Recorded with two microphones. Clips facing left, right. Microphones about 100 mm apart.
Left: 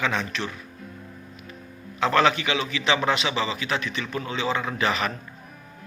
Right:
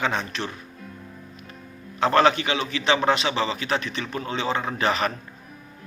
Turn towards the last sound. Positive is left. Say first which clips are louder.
# right 2 dB
turn(degrees=-40)  # may be behind; listen again after turning